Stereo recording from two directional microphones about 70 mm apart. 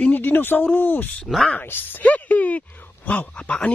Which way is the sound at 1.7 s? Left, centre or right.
Left.